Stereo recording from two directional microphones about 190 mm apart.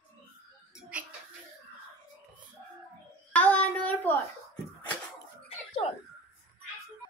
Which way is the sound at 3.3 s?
10° left (ahead or behind).